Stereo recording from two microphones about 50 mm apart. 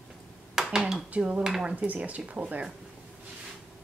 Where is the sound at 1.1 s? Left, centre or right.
Right.